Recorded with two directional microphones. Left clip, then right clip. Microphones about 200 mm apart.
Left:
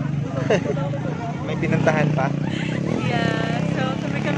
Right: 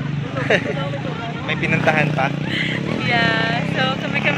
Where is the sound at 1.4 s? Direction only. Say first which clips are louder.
Right 3 dB; 25° left (ahead or behind).